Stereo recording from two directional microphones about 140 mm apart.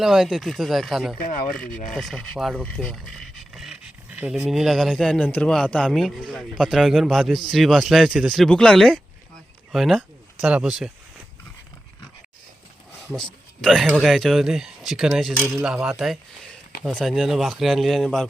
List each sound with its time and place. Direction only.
0.0 s speech: 5° right (ahead or behind)
1.2 s speech: 75° left (ahead or behind)
1.9 s speech: 5° left (ahead or behind)
13.6 s speech: centre (ahead or behind)